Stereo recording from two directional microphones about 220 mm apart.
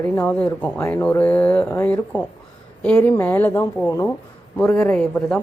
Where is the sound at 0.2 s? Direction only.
10° left (ahead or behind).